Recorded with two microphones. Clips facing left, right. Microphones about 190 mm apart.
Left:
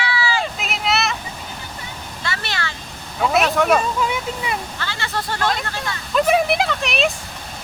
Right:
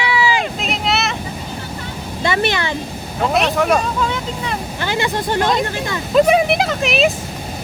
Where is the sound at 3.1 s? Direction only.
Centre (ahead or behind).